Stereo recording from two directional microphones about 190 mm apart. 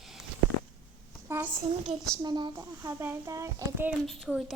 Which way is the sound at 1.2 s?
10° right (ahead or behind).